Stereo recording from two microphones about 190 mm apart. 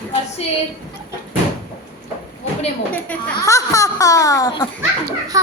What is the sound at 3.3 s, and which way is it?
Speech, 15° left (ahead or behind).